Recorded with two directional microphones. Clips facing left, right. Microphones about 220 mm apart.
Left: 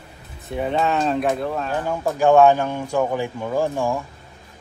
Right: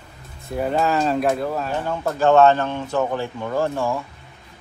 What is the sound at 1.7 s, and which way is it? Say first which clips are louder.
Speech: left 1 dB; 10° left (ahead or behind).